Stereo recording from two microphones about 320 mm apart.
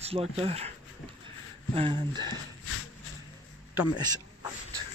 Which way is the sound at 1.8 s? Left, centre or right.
Centre.